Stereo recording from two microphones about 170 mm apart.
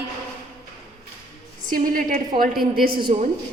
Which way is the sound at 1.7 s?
55° right (ahead or behind).